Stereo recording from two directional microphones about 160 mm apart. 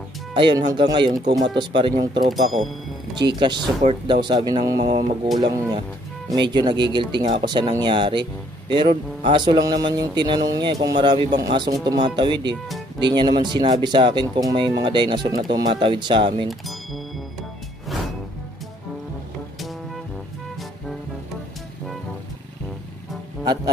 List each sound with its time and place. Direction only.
0.3 s speech: 30° right (ahead or behind)
2.3 s speech: centre (ahead or behind)
3.2 s speech: 30° right (ahead or behind)
16.4 s music: centre (ahead or behind)
23.4 s speech: 25° right (ahead or behind)